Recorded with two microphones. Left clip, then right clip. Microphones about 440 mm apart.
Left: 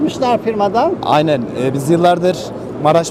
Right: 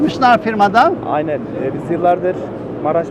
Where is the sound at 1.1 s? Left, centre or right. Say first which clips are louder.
Left 5 dB; left.